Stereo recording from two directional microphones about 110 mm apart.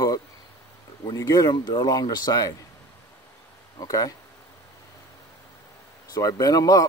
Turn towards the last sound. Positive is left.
turn(degrees=35)  # may be behind; listen again after turning